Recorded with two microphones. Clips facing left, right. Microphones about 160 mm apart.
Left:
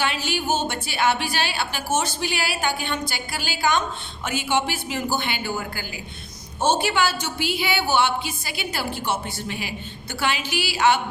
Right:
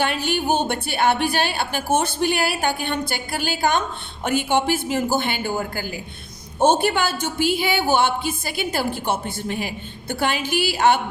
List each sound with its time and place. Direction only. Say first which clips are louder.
0.0 s a woman's voice: right 3 dB; 55° right (ahead or behind)